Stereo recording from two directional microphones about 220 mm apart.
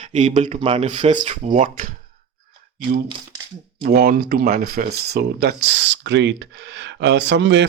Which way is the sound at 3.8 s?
45° right (ahead or behind).